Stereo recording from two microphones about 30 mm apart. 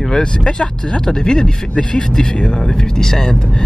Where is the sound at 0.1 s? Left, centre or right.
Left.